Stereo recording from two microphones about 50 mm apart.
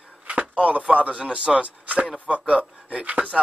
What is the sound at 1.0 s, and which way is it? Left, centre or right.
Speech, right.